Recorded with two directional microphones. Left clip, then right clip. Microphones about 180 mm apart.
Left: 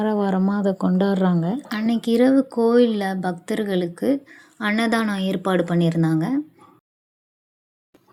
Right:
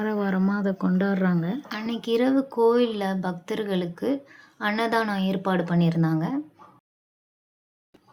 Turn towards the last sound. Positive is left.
turn(degrees=25)  # may be behind; listen again after turning